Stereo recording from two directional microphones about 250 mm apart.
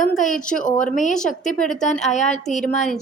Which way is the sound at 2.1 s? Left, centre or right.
Left.